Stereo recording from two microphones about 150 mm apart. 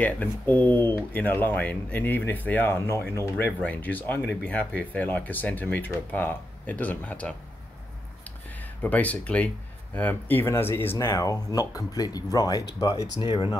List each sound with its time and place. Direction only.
0.0 s speech: 10° left (ahead or behind)
8.2 s a sound: 10° left (ahead or behind)
9.9 s speech: 10° left (ahead or behind); by 13.6 s 30° left (ahead or behind)